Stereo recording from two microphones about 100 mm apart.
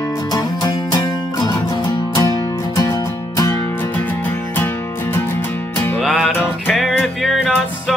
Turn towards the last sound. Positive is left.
turn(degrees=-5)  # may be behind; listen again after turning